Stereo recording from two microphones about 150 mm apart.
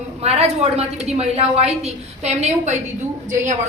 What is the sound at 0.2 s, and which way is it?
A woman's voice, 45° right (ahead or behind).